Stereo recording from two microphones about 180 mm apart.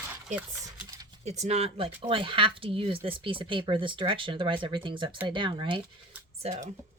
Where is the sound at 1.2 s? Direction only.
40° right (ahead or behind).